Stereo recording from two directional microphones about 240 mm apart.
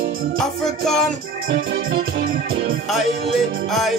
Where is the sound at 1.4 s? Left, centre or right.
Right.